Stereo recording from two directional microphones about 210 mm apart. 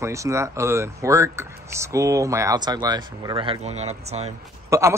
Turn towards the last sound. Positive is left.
turn(degrees=-15)  # may be behind; listen again after turning